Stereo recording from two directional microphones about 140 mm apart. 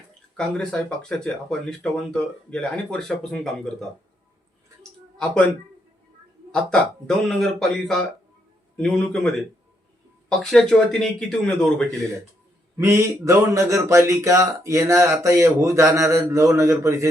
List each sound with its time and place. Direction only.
0.3 s speech: 5° left (ahead or behind)
4.8 s a sound: 5° left (ahead or behind)
6.5 s speech: 5° left (ahead or behind)
12.8 s speech: 20° right (ahead or behind)